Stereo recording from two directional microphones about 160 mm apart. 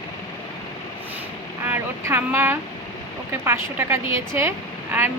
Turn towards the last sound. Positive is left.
turn(degrees=-10)  # may be behind; listen again after turning